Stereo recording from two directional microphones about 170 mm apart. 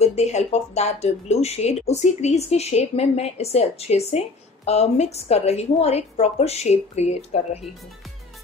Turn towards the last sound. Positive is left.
turn(degrees=40)  # may be behind; listen again after turning